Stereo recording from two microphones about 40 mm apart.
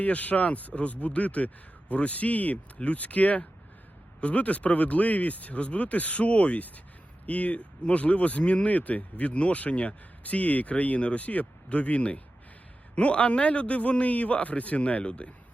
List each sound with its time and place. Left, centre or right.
0.0 s speech: left